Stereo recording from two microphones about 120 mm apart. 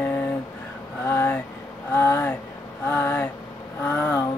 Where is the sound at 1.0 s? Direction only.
15° left (ahead or behind).